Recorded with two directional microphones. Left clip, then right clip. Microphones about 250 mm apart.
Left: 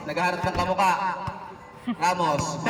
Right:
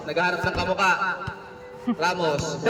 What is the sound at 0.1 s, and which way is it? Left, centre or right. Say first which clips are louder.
A man's voice: right 2 dB; centre.